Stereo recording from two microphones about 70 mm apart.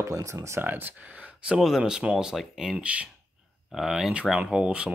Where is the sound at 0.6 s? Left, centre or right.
Right; by 2.8 s centre.